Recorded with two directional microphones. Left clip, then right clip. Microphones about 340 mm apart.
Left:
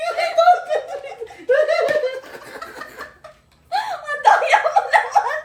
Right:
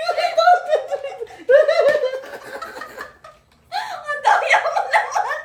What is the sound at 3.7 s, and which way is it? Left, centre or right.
Giggle, centre.